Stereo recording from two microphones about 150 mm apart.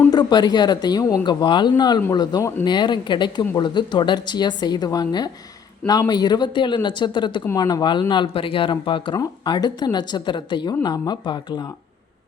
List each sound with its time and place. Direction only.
0.1 s speech: 30° left (ahead or behind)